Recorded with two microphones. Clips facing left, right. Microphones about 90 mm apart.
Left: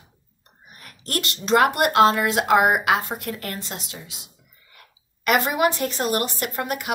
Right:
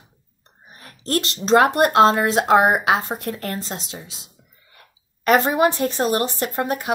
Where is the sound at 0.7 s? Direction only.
30° right (ahead or behind).